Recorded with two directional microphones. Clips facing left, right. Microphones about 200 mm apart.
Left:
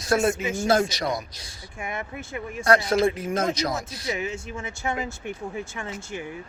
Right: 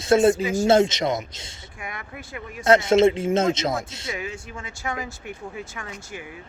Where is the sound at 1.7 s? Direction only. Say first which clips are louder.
Left 4 dB; 25° left (ahead or behind).